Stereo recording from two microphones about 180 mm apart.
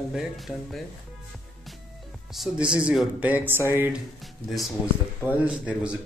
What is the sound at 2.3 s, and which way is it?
Speech, 5° right (ahead or behind).